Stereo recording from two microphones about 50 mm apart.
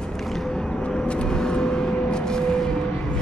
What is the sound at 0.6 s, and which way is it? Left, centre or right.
Vehicle, centre.